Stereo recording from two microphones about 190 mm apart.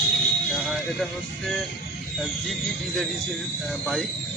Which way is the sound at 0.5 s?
Centre (ahead or behind).